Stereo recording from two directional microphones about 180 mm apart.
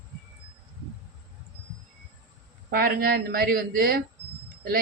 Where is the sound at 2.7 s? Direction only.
55° right (ahead or behind).